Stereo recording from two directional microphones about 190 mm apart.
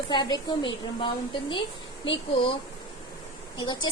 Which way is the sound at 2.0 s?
30° left (ahead or behind).